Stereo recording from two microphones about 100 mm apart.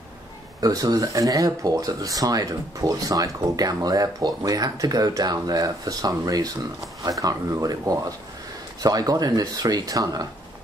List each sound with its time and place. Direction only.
0.6 s speech: 40° right (ahead or behind)